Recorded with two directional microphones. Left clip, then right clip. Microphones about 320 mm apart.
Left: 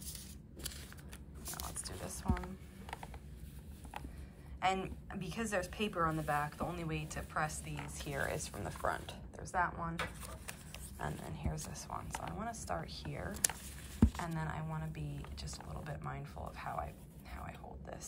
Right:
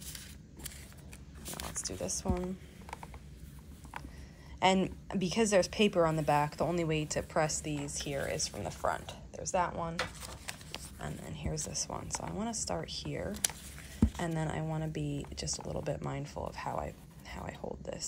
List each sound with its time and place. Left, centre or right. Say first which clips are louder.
1.9 s speech: right 7 dB; centre
4.6 s speech: right 6 dB; centre
9.9 s a sound: right 4 dB; right
11.0 s speech: left 4 dB; centre